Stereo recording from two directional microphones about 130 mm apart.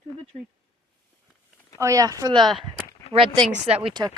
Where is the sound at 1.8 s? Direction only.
25° right (ahead or behind).